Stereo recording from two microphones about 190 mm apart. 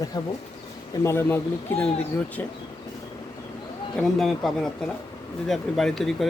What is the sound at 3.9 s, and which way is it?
Speech, centre (ahead or behind).